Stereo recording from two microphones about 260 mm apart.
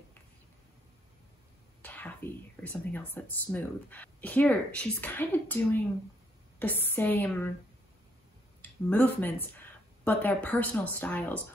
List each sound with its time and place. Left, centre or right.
1.8 s a sound: centre
2.7 s speech: centre
8.6 s speech: centre